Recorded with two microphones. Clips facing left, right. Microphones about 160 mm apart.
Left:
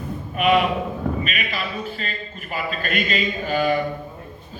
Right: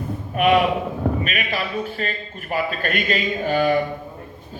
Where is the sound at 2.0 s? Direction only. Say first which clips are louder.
Right 4 dB; 50° right (ahead or behind).